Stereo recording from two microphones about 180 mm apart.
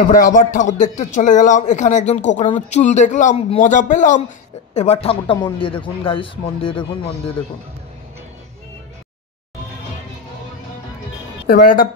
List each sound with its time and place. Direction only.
0.1 s a man's voice: 50° left (ahead or behind)
4.7 s speech: 35° left (ahead or behind)
11.4 s a man's voice: 55° left (ahead or behind)